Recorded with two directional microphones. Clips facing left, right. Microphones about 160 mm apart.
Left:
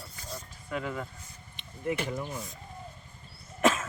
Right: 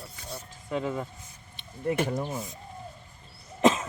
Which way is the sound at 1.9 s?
45° right (ahead or behind).